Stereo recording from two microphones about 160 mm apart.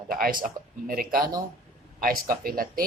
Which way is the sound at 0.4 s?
65° right (ahead or behind).